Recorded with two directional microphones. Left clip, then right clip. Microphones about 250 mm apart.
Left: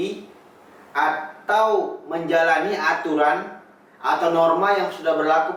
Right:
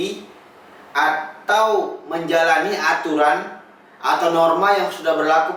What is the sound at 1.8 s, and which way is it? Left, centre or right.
Speech, left.